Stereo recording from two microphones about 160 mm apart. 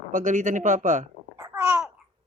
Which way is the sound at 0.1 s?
55° right (ahead or behind).